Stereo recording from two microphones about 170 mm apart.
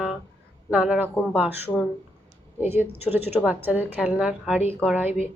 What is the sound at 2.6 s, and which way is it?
A woman's voice, 10° right (ahead or behind).